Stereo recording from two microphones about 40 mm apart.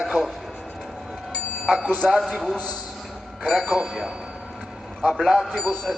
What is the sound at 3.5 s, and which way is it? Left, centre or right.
Speech, centre.